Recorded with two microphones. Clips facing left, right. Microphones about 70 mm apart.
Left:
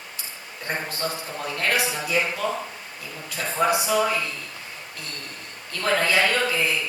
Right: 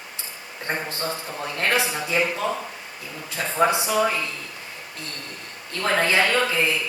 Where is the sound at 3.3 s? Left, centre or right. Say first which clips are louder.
Right 1 dB; right.